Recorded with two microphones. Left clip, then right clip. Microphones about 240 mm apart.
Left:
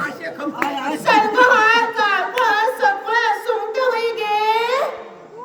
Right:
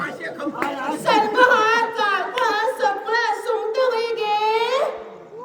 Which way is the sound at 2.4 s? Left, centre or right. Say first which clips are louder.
Left 4 dB; centre.